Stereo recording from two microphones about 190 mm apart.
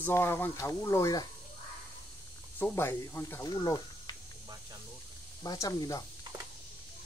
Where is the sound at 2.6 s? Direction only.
10° left (ahead or behind).